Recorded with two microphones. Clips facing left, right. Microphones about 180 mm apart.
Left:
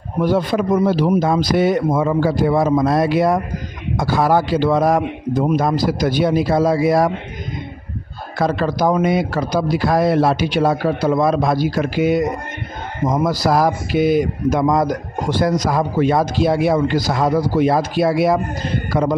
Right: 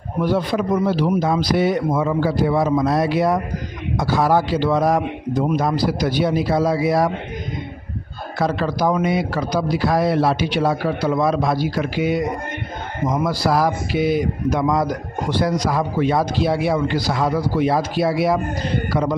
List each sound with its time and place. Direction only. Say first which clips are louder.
0.2 s a man's voice: left 3 dB; 45° left (ahead or behind)
8.4 s a man's voice: left 2 dB; 50° left (ahead or behind)